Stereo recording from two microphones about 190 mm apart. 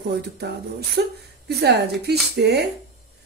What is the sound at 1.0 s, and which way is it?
Speech, 65° right (ahead or behind).